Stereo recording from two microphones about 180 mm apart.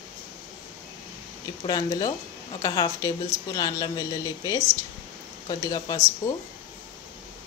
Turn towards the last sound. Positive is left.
turn(degrees=15)  # may be behind; listen again after turning